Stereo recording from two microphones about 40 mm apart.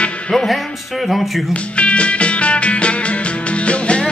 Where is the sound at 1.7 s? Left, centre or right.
Left.